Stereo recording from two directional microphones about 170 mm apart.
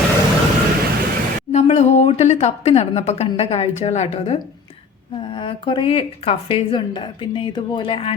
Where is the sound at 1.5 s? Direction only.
40° left (ahead or behind).